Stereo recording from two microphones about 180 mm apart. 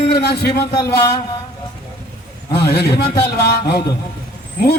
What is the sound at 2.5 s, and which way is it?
Speech, 60° left (ahead or behind).